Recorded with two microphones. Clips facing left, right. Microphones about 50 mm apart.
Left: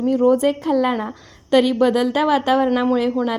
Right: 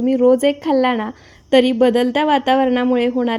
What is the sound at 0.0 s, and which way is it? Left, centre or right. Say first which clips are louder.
A woman's voice: right 3 dB; right.